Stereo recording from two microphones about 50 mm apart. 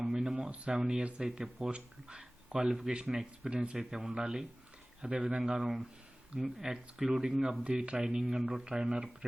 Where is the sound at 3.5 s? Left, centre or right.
Centre.